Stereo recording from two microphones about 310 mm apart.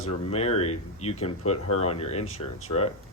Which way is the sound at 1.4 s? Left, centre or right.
Left.